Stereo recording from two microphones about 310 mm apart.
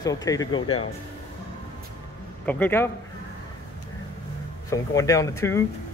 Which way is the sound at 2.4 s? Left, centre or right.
Centre.